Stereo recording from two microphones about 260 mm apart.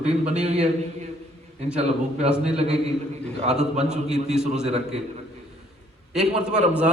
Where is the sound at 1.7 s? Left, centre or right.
Right.